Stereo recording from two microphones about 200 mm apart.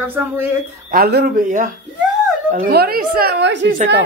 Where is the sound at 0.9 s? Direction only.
50° right (ahead or behind).